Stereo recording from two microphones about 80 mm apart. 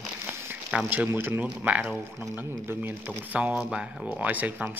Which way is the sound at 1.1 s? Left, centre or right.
Right.